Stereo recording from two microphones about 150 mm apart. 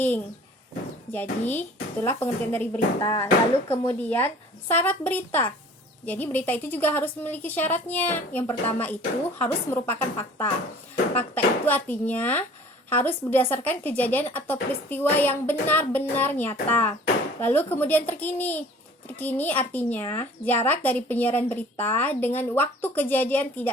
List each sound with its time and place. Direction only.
1.1 s speech: 15° left (ahead or behind)